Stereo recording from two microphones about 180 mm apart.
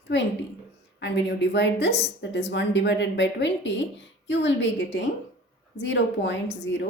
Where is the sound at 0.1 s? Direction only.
75° left (ahead or behind); by 4.5 s 90° left.